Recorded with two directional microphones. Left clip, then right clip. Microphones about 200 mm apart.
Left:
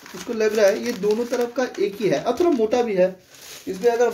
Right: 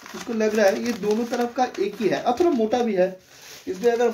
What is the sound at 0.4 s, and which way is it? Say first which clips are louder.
Speech: left 2 dB; centre (ahead or behind).